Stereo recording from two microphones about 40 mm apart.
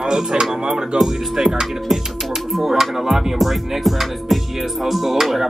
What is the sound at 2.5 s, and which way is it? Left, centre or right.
Speech, centre.